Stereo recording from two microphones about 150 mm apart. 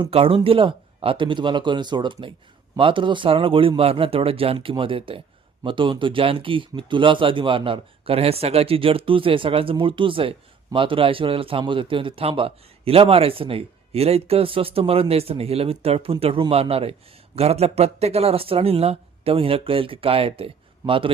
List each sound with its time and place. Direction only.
0.0 s speech: 40° right (ahead or behind)